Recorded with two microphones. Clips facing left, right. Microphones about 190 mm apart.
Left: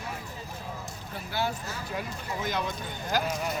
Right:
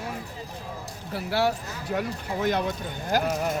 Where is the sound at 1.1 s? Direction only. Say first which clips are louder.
Right 7 dB; 75° right (ahead or behind); by 3.6 s 55° right (ahead or behind).